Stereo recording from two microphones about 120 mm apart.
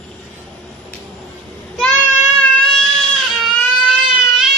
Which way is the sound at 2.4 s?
Centre (ahead or behind).